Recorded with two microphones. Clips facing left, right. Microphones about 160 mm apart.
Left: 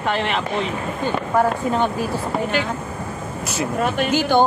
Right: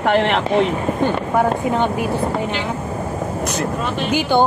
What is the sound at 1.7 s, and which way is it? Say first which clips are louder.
Speech: right 2 dB; 20° right (ahead or behind).